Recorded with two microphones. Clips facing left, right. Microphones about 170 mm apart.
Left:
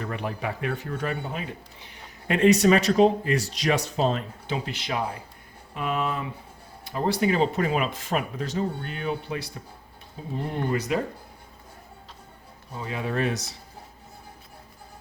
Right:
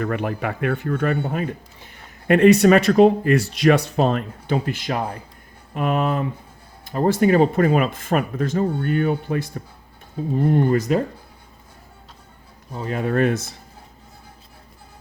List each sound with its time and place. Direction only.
0.0 s speech: 60° right (ahead or behind); by 11.0 s 45° right (ahead or behind)
12.8 s speech: 50° right (ahead or behind)